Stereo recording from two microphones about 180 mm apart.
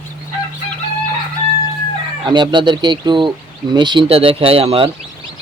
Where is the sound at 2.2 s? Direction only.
25° right (ahead or behind).